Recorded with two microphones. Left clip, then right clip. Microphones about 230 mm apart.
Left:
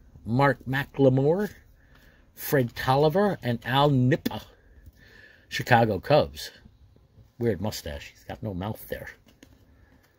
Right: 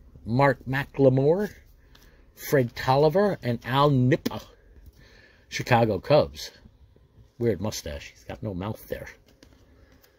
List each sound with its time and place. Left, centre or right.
0.3 s speech: centre